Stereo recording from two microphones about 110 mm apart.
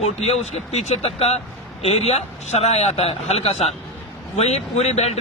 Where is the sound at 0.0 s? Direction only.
75° left (ahead or behind).